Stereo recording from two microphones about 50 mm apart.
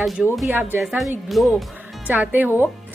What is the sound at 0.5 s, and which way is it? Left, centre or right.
Speech, right.